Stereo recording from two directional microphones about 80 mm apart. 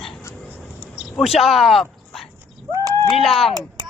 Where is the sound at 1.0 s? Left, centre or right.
Centre.